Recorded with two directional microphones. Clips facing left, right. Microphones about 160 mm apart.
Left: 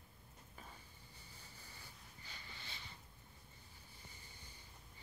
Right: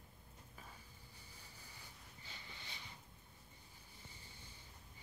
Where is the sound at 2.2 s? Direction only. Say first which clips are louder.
Even; 20° right (ahead or behind).